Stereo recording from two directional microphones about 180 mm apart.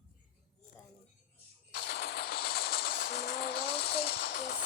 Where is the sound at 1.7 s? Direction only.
60° left (ahead or behind).